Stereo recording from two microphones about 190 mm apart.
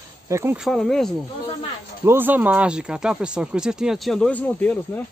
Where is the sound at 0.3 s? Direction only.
15° right (ahead or behind).